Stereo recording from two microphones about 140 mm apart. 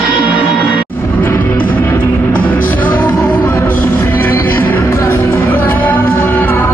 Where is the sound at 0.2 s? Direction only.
10° right (ahead or behind).